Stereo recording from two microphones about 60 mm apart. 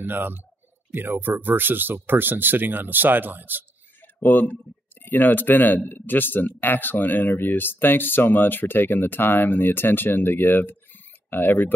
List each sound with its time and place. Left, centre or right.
0.0 s speech: right
4.0 s a sound: left
5.0 s speech: left